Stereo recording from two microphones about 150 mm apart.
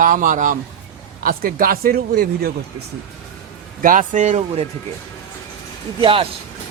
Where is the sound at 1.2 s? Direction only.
70° right (ahead or behind); by 2.5 s 90° right.